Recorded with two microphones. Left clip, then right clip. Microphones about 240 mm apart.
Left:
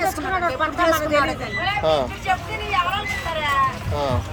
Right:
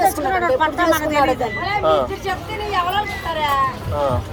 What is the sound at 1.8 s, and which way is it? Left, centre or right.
Speech, left.